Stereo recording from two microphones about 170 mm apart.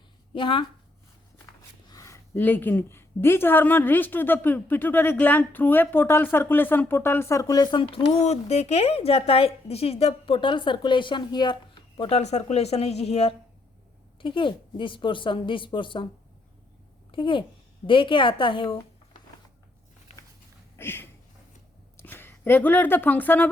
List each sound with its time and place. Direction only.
0.3 s a woman's voice: 30° left (ahead or behind)
1.9 s a woman's voice: 20° left (ahead or behind)
17.1 s a child's voice: 30° left (ahead or behind)
20.7 s a sound: 15° left (ahead or behind)
21.9 s speech: 10° left (ahead or behind)